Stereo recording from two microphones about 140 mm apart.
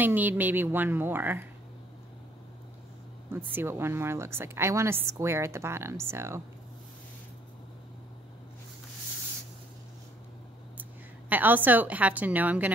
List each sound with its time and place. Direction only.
0.0 s a woman's voice: 15° right (ahead or behind)
3.3 s a woman's voice: 15° right (ahead or behind)
10.8 s a woman's voice: 10° right (ahead or behind)